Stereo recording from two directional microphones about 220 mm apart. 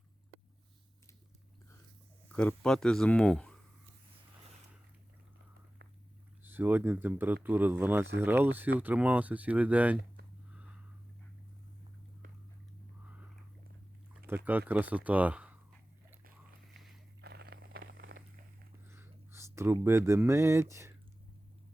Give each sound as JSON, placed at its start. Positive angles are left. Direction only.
{"t": 2.3, "sound": "speech", "side_deg": 5}
{"t": 6.4, "sound": "speech", "side_deg": -10}
{"t": 14.3, "sound": "speech", "side_deg": -10}
{"t": 17.2, "sound": "a sound", "side_deg": -45}
{"t": 18.9, "sound": "speech", "side_deg": -10}